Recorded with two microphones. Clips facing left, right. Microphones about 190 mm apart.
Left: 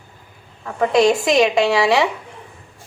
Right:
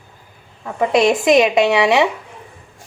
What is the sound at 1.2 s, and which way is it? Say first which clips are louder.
Speech: right 3 dB; 20° right (ahead or behind).